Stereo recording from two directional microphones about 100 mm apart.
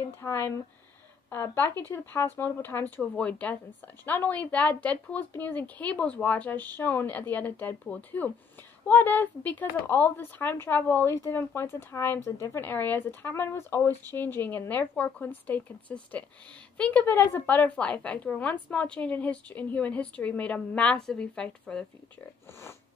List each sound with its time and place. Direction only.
0.2 s a woman's voice: 25° left (ahead or behind); by 21.8 s 10° left (ahead or behind)
22.5 s speech: 25° left (ahead or behind)